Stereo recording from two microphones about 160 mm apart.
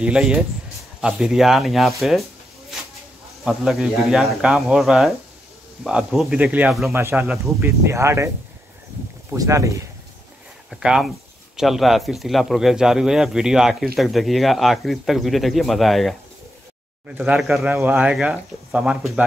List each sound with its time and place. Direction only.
0.0 s speech: 5° right (ahead or behind)
3.4 s speech: centre (ahead or behind); by 8.3 s 15° right (ahead or behind)
9.3 s speech: 20° right (ahead or behind)
10.7 s speech: 5° right (ahead or behind)
17.2 s speech: 5° right (ahead or behind)